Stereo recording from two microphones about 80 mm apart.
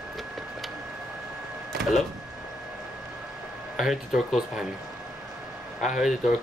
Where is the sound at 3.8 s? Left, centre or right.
Centre.